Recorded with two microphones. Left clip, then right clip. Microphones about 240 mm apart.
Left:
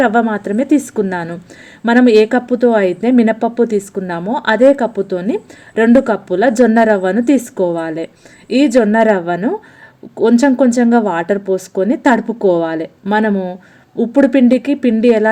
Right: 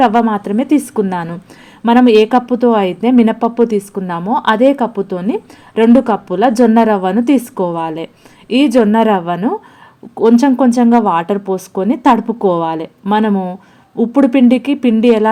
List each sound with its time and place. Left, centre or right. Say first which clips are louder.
0.0 s speech: right 2 dB; centre
12.1 s speech: even; right
12.5 s speech: even; centre